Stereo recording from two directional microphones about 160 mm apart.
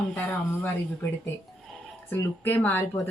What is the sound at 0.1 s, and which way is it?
Speech, 10° left (ahead or behind).